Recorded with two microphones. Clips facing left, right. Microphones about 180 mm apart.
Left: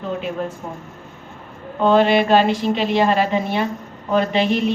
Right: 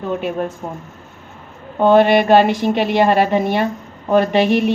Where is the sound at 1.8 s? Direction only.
55° right (ahead or behind).